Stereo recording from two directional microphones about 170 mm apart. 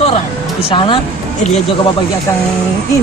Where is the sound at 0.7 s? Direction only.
30° left (ahead or behind).